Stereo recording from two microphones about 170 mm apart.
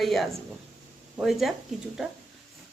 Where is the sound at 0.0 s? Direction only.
Centre (ahead or behind).